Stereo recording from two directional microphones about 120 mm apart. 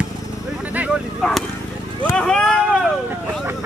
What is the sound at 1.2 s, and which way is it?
Speech, centre (ahead or behind).